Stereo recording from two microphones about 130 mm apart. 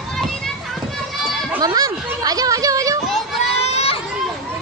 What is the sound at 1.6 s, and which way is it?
Speech, 30° right (ahead or behind).